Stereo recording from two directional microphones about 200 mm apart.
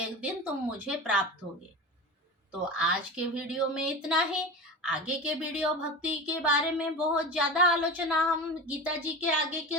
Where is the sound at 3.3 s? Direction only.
5° right (ahead or behind).